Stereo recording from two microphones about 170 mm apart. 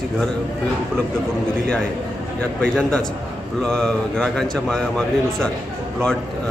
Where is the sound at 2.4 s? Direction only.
5° left (ahead or behind).